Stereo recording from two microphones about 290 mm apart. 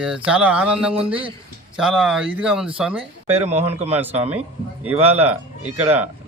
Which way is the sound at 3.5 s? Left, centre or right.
Right.